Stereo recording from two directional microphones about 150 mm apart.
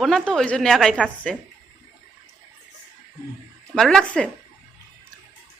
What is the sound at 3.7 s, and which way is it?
Speech, 5° left (ahead or behind).